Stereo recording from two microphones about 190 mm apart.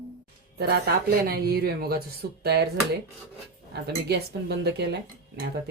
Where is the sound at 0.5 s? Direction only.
55° right (ahead or behind).